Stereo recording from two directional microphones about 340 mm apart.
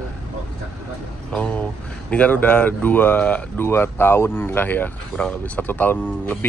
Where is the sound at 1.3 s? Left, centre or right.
Centre.